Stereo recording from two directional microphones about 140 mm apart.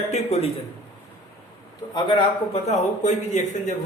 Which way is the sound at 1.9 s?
35° left (ahead or behind).